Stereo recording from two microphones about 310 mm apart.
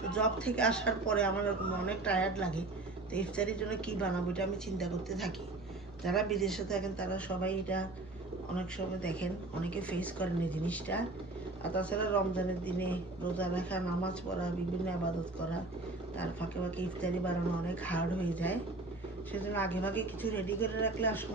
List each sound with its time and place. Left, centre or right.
0.1 s a woman's voice: centre
16.2 s a woman's voice: centre